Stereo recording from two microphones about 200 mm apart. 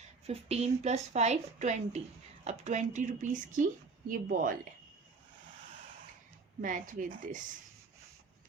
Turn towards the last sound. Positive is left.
turn(degrees=-40)  # may be behind; listen again after turning